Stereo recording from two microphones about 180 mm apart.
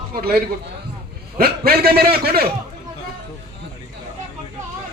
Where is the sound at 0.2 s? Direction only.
60° right (ahead or behind).